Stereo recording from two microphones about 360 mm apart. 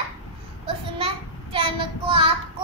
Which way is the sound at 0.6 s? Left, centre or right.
Centre.